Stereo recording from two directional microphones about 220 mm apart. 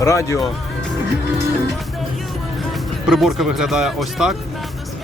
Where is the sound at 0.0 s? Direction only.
15° left (ahead or behind).